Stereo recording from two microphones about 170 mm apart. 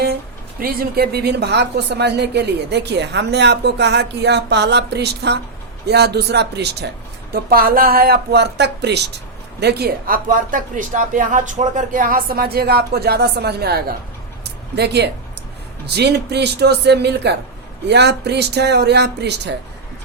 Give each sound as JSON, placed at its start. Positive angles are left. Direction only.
{"t": 0.6, "sound": "speech", "side_deg": -60}
{"t": 7.5, "sound": "speech", "side_deg": -60}